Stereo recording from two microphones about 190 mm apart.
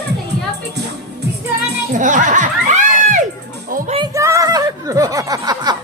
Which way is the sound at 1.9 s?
40° right (ahead or behind).